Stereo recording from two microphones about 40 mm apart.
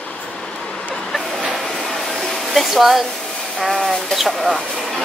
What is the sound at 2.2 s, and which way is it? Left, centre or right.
Hair dryer, centre.